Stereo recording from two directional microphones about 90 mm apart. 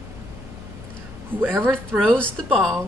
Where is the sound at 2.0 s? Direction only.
10° left (ahead or behind).